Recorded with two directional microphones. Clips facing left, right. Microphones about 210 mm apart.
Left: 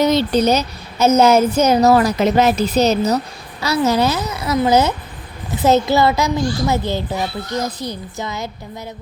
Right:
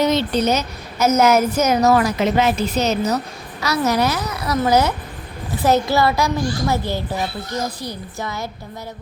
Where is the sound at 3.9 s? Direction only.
25° left (ahead or behind).